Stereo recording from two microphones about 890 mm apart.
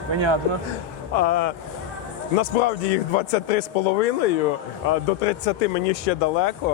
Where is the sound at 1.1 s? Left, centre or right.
Left.